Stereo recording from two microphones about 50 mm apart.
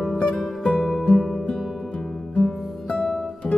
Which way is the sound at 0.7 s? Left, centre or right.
Centre.